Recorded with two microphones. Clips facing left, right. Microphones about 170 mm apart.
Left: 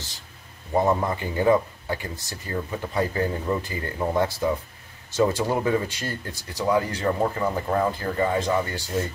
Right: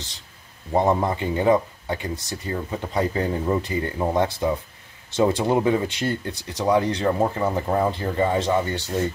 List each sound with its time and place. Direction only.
0.8 s speech: 20° right (ahead or behind)